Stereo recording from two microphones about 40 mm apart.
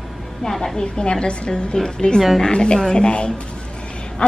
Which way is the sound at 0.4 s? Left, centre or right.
Centre.